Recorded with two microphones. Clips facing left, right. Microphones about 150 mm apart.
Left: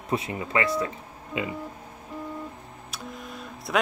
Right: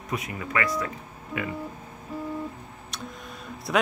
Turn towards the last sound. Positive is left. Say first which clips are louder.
# right 1 dB
turn(degrees=0)  # may be behind; listen again after turning